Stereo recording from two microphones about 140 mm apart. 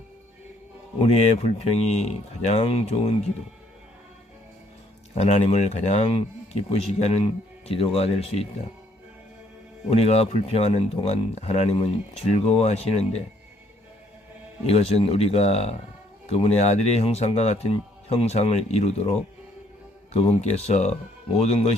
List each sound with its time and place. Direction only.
0.9 s speech: 45° left (ahead or behind)
5.1 s speech: 50° left (ahead or behind)
9.9 s speech: 50° left (ahead or behind)
14.7 s speech: 45° left (ahead or behind)
20.1 s speech: 50° left (ahead or behind)